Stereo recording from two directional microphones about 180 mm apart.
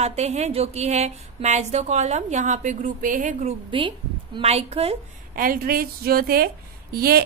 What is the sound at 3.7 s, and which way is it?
A woman's voice, 25° right (ahead or behind).